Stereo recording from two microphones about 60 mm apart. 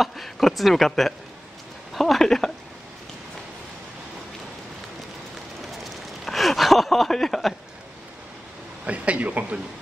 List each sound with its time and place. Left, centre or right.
0.0 s speech: centre
5.7 s a sound: centre
8.8 s speech: right